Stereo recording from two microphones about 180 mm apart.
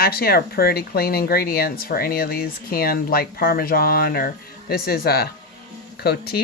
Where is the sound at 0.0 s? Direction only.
60° left (ahead or behind).